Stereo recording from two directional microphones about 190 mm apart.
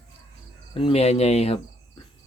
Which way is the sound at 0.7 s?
30° left (ahead or behind).